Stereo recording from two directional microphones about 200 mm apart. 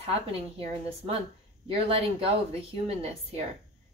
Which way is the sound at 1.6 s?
30° right (ahead or behind).